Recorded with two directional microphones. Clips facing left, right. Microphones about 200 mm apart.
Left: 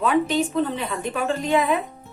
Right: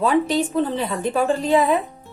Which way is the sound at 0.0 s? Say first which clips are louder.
Right 2 dB; 35° right (ahead or behind).